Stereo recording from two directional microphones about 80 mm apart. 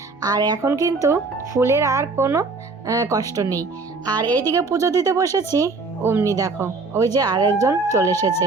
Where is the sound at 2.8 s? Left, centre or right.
Right.